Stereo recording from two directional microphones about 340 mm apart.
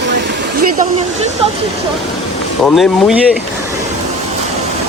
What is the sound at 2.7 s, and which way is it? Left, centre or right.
Speech, centre.